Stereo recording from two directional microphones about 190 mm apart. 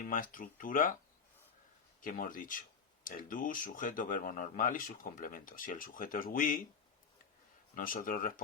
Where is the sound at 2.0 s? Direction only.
45° left (ahead or behind).